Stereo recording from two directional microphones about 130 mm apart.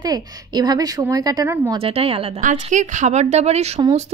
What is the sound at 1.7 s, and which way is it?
Speech, 45° right (ahead or behind).